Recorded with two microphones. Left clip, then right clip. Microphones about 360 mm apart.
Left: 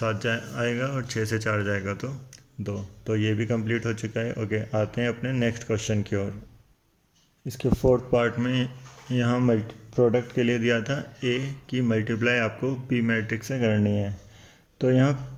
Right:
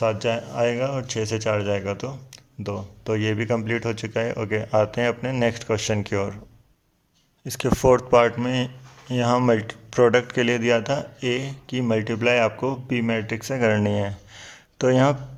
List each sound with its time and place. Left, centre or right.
0.0 s speech: centre
7.4 s speech: centre
7.7 s speech: right
8.1 s speech: centre
13.7 s speech: right
14.3 s a sound: centre